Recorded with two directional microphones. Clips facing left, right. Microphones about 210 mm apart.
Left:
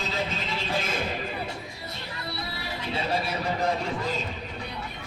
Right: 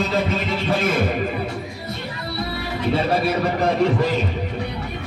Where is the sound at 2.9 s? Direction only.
65° right (ahead or behind).